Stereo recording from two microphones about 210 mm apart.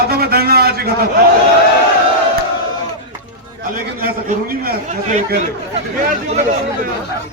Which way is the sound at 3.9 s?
45° right (ahead or behind).